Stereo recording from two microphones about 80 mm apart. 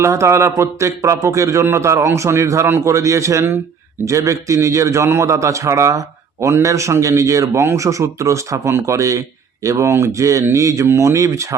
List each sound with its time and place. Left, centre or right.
0.0 s a man's voice: right
2.6 s a man's voice: right
2.9 s a man's voice: right